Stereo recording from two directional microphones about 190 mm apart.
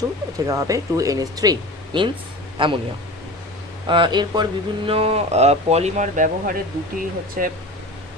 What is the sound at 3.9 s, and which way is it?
Speech, 25° right (ahead or behind).